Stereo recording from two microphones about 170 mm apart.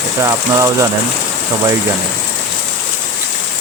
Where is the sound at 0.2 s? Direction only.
20° right (ahead or behind).